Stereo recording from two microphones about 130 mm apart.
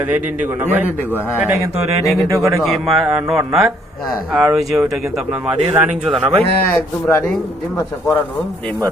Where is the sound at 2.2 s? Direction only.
20° right (ahead or behind).